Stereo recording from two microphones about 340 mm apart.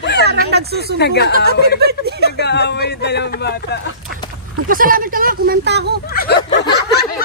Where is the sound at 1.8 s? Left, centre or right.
Right.